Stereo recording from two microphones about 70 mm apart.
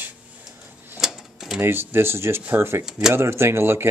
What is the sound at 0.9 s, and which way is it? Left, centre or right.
Typewriter, centre.